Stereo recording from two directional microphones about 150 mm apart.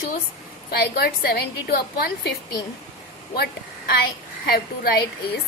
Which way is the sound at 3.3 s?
90° left.